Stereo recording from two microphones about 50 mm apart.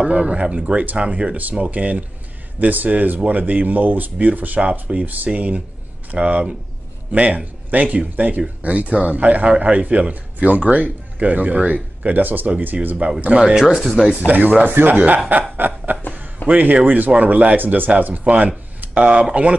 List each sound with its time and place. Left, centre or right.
0.0 s a man's voice: centre; by 12.9 s right
12.9 s a man's voice: right
14.1 s speech: right
15.5 s snicker: right
16.4 s speech: right
18.8 s a sound: right